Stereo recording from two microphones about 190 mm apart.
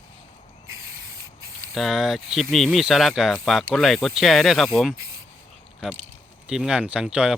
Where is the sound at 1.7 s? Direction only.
Centre (ahead or behind).